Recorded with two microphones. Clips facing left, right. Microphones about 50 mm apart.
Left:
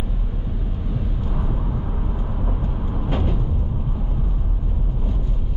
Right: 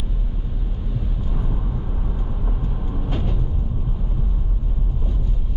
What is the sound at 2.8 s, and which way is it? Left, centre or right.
Music, left.